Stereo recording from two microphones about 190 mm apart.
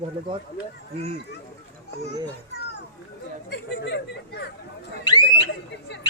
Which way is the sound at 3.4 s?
65° left (ahead or behind).